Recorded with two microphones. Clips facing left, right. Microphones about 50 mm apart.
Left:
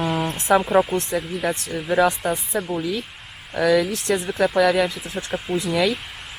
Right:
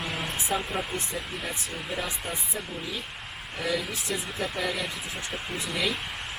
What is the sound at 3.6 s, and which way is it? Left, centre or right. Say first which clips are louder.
Speech: left 12 dB; left.